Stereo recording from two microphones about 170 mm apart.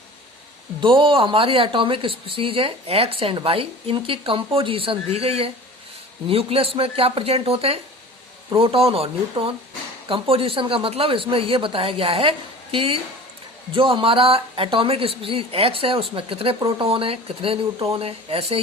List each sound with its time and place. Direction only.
0.8 s a woman's voice: 30° right (ahead or behind)